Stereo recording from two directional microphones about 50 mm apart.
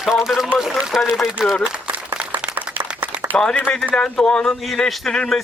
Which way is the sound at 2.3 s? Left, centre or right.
Right.